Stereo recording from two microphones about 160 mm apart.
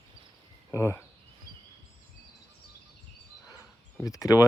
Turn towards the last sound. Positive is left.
turn(degrees=20)  # may be behind; listen again after turning